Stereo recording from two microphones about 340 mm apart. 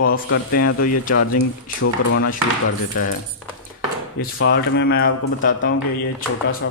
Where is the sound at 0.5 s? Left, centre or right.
Left.